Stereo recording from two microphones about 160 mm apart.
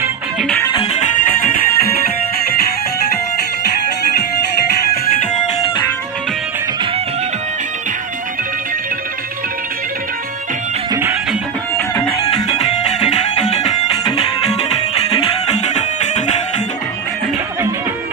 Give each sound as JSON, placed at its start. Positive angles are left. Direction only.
{"t": 1.1, "sound": "music", "side_deg": 65}
{"t": 11.9, "sound": "music", "side_deg": 20}
{"t": 12.7, "sound": "music", "side_deg": 45}